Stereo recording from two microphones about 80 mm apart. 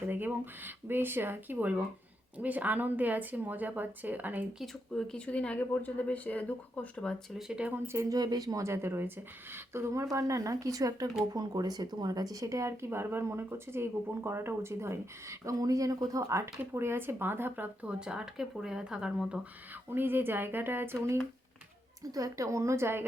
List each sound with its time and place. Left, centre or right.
0.1 s a woman's voice: right
4.6 s speech: centre
7.3 s speech: centre
7.9 s speech: right
8.6 s speech: right
17.8 s speech: centre
19.9 s a woman's voice: right
22.1 s speech: right